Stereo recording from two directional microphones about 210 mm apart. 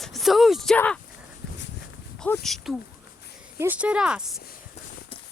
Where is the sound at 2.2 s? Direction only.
5° left (ahead or behind).